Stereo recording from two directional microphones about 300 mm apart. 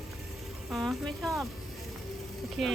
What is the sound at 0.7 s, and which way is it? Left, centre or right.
Speech, centre.